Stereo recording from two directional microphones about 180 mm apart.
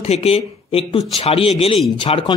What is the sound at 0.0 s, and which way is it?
A man's voice, 35° left (ahead or behind).